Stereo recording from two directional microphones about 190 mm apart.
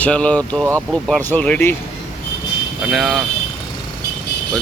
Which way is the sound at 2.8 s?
Centre (ahead or behind).